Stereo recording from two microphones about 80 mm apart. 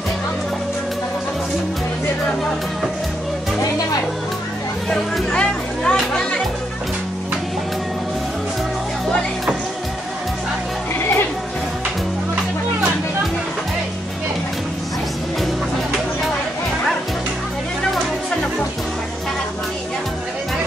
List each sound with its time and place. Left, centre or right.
4.8 s speech: centre
11.0 s music: left